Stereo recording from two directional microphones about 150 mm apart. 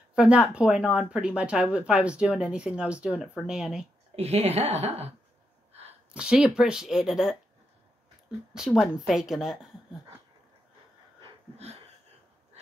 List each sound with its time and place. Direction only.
0.1 s speech: 5° right (ahead or behind)
4.1 s a woman's voice: 45° right (ahead or behind)
6.1 s speech: 5° right (ahead or behind)
8.5 s speech: 5° right (ahead or behind)
11.1 s wheeze: 45° right (ahead or behind)